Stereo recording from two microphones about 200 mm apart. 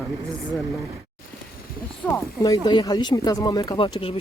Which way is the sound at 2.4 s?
20° left (ahead or behind).